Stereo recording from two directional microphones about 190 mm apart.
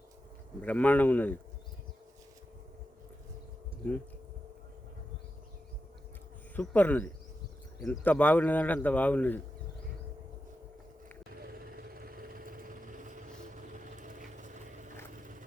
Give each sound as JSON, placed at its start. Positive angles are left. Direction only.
{"t": 0.6, "sound": "speech", "side_deg": 10}
{"t": 6.6, "sound": "speech", "side_deg": 10}
{"t": 11.3, "sound": "vehicle", "side_deg": -50}